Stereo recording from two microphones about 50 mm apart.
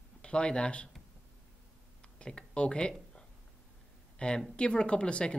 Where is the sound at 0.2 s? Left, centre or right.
Centre.